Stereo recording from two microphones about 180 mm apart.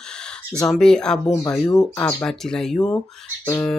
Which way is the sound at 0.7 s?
5° left (ahead or behind).